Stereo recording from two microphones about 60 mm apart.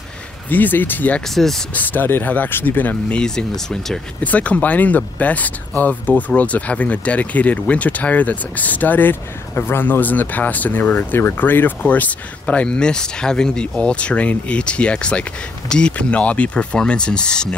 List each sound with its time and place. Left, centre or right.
0.5 s speech: left
1.3 s speech: centre
1.7 s speech: left
3.2 s speech: centre
4.2 s speech: left